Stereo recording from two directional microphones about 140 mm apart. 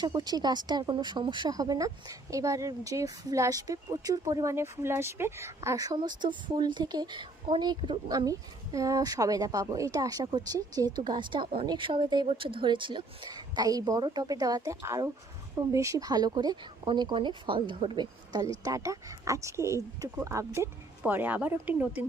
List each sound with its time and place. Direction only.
0.0 s speech: 30° right (ahead or behind); by 22.0 s 15° right (ahead or behind)